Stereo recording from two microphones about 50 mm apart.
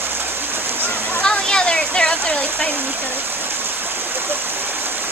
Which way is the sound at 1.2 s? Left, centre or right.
Centre.